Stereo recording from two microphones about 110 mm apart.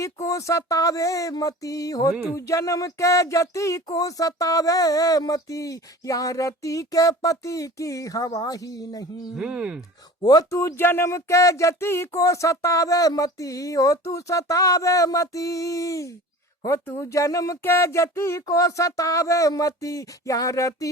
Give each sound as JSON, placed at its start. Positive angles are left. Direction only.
{"t": 0.0, "sound": "speech", "side_deg": 30}
{"t": 9.4, "sound": "speech", "side_deg": -10}
{"t": 10.2, "sound": "speech", "side_deg": 40}
{"t": 10.5, "sound": "a sound", "side_deg": 25}